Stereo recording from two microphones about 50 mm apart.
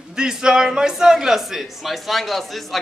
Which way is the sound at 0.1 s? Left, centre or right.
Centre.